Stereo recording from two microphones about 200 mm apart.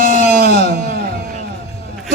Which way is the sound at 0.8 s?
50° right (ahead or behind).